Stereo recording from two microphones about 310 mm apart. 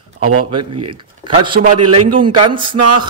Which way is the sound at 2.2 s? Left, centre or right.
Centre.